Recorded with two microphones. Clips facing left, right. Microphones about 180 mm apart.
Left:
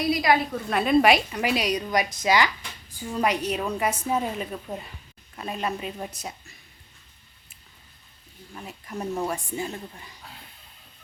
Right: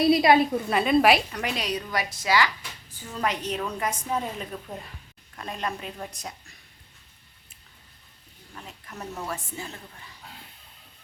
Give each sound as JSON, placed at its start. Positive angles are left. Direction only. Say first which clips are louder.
{"t": 0.0, "sound": "a woman's voice", "louder": "right 4 dB", "side_deg": -25}
{"t": 0.7, "sound": "a woman's voice", "louder": "left 2 dB", "side_deg": 0}
{"t": 8.5, "sound": "a woman's voice", "louder": "left 6 dB", "side_deg": 10}